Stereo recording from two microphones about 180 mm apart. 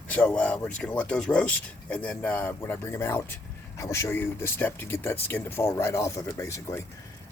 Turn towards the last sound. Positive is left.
turn(degrees=15)  # may be behind; listen again after turning